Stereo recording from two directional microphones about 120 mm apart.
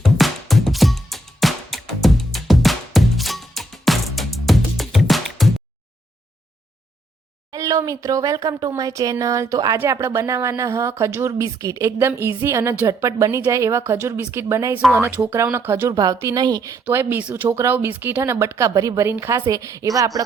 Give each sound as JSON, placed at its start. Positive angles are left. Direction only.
{"t": 0.0, "sound": "music", "side_deg": 0}
{"t": 7.5, "sound": "speech", "side_deg": -30}
{"t": 16.2, "sound": "a woman's voice", "side_deg": -35}
{"t": 16.8, "sound": "speech", "side_deg": -15}